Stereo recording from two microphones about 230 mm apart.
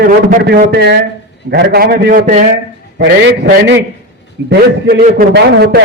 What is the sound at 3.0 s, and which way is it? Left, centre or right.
A man's voice, right.